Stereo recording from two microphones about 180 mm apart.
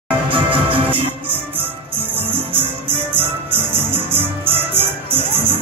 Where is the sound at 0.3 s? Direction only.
30° right (ahead or behind).